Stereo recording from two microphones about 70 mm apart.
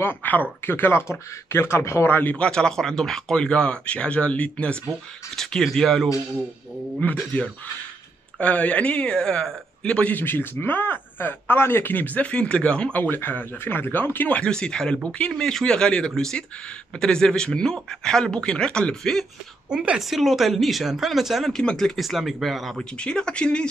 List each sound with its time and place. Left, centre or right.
0.0 s speech: left
2.3 s speech: centre
5.3 s speech: centre
7.0 s speech: centre
14.4 s speech: centre
19.7 s a woman's voice: centre
20.0 s speech: centre
21.5 s speech: centre
22.9 s speech: centre